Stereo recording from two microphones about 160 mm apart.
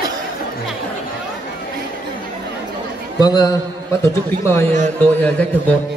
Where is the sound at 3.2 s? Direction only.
25° left (ahead or behind); by 5.8 s 10° left (ahead or behind).